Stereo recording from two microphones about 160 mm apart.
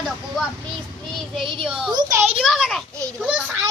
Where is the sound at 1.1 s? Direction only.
Centre (ahead or behind).